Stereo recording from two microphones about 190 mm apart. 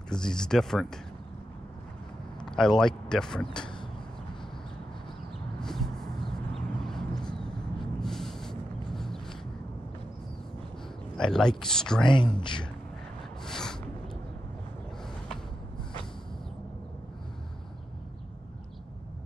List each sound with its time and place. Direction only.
0.1 s speech: 5° left (ahead or behind)
2.4 s a sound: 5° left (ahead or behind)
2.8 s speech: 5° left (ahead or behind)
5.6 s a sound: centre (ahead or behind)
11.1 s speech: 5° left (ahead or behind)
12.1 s speech: 25° left (ahead or behind)
13.5 s snort: 5° left (ahead or behind)